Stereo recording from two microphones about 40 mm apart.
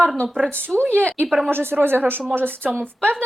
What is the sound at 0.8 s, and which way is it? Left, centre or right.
Speech, right.